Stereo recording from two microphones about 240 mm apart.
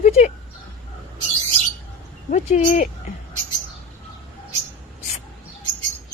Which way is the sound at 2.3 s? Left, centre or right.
Left.